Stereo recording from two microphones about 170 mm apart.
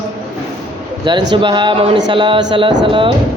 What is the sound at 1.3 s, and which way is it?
Speech, 30° right (ahead or behind).